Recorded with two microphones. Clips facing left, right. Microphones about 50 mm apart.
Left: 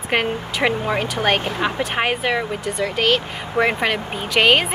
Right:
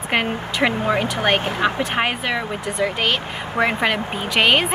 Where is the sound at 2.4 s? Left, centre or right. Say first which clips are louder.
Right 1 dB; centre.